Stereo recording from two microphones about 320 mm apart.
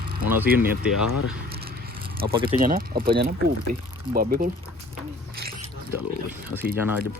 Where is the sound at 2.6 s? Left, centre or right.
Right.